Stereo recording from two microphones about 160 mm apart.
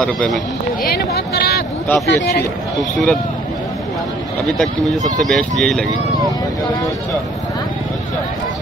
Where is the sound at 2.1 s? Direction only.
90° left.